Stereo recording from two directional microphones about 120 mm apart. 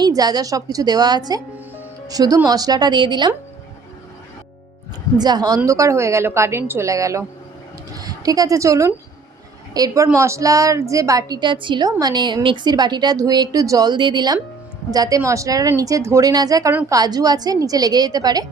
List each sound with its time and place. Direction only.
0.0 s a woman's voice: 35° right (ahead or behind)
5.1 s a woman's voice: 35° right (ahead or behind)